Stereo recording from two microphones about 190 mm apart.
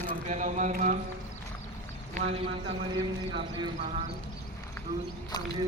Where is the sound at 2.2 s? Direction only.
35° right (ahead or behind).